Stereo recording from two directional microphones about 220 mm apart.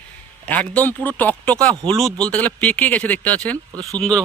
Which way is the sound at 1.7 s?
20° right (ahead or behind).